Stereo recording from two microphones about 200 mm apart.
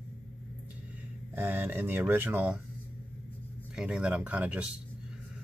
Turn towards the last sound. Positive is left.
turn(degrees=-5)  # may be behind; listen again after turning